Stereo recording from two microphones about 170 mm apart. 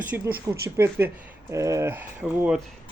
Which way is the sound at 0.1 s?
10° right (ahead or behind).